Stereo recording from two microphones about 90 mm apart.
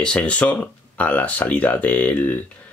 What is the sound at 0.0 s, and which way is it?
Speech, 10° left (ahead or behind).